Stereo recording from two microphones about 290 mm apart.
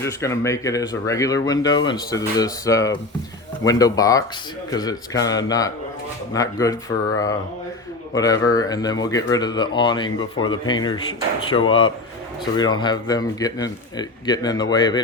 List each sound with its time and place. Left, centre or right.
0.0 s speech: centre